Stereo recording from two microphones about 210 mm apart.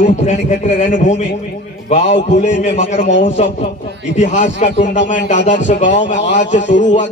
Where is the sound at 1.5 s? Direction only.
50° left (ahead or behind).